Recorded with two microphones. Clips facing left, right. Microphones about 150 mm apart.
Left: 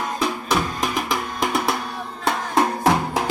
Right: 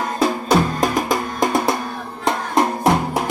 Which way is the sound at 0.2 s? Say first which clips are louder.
Right 7 dB; 45° right (ahead or behind).